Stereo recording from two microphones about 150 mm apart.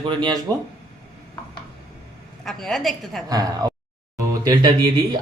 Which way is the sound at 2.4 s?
Centre (ahead or behind).